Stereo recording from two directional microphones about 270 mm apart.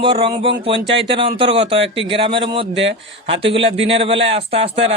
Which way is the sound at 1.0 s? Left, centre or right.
Centre.